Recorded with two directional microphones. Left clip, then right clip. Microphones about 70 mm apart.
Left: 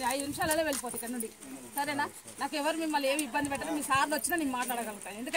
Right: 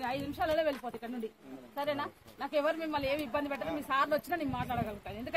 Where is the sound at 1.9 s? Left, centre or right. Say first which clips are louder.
Left 4 dB; right.